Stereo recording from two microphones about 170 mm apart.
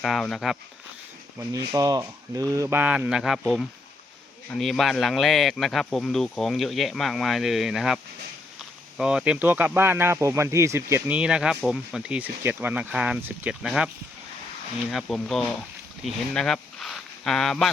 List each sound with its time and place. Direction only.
0.0 s speech: centre (ahead or behind)
1.4 s speech: 20° right (ahead or behind); by 17.7 s centre (ahead or behind)